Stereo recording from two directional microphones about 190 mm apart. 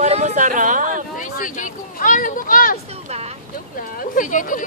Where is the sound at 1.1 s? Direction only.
45° left (ahead or behind).